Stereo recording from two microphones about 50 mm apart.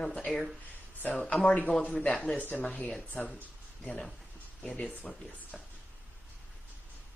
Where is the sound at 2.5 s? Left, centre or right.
Left.